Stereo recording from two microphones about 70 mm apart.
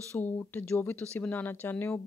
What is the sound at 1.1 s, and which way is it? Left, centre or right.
Speech, left.